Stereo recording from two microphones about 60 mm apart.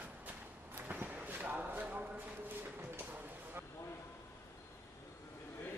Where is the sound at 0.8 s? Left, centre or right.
Right.